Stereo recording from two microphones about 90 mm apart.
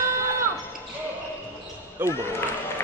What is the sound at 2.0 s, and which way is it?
Basketball bounce, 20° right (ahead or behind).